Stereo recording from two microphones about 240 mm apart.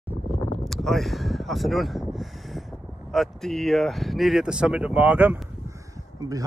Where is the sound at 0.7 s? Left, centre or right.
Centre.